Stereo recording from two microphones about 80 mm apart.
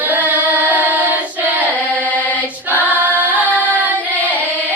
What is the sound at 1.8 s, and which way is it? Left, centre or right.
Singing, centre.